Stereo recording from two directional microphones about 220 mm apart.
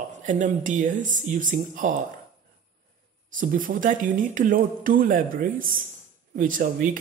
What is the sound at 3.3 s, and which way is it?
A woman's voice, 35° right (ahead or behind).